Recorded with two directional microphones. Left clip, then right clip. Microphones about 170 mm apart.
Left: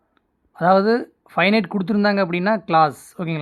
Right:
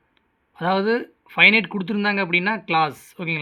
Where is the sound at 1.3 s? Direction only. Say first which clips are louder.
Right 3 dB; 40° left (ahead or behind).